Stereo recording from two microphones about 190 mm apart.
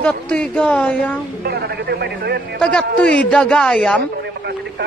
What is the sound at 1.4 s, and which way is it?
Speech, 55° right (ahead or behind).